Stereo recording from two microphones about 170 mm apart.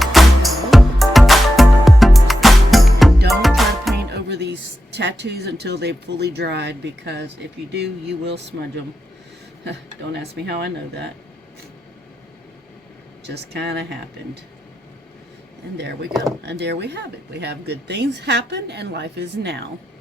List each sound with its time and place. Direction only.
0.0 s music: centre (ahead or behind)
4.1 s speech: 80° right
8.3 s speech: 90° right; by 11.1 s 75° right (ahead or behind)
13.2 s speech: 80° right
15.8 s a woman's voice: 85° right